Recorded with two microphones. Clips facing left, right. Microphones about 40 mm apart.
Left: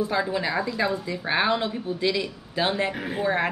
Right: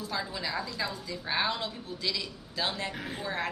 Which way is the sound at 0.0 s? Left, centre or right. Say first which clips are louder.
Left 10 dB; left.